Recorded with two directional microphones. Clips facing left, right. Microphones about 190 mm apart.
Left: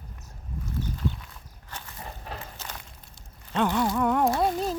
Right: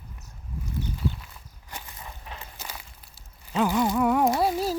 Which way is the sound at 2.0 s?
45° left (ahead or behind).